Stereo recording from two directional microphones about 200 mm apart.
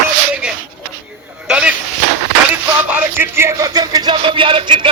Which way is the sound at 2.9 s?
10° right (ahead or behind).